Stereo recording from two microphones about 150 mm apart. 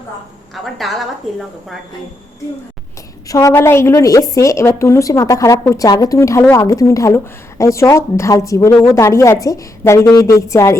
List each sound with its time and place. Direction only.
0.5 s a woman's voice: centre (ahead or behind)
3.2 s a woman's voice: 20° left (ahead or behind)